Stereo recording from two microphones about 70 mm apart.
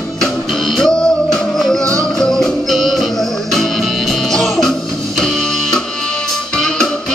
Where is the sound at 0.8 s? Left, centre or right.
Centre.